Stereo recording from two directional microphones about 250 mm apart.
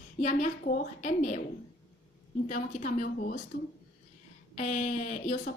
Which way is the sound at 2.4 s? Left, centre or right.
Left.